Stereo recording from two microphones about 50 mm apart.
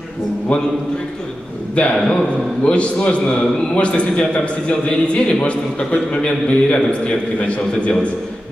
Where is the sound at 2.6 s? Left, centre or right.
Left.